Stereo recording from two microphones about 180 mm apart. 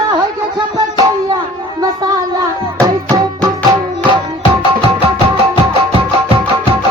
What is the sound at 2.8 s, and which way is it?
Music, 20° right (ahead or behind).